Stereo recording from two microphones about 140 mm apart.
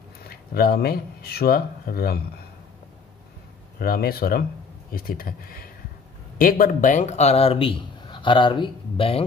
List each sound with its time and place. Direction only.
0.3 s speech: 90° left
3.8 s speech: 90° left; by 9.2 s 40° left (ahead or behind)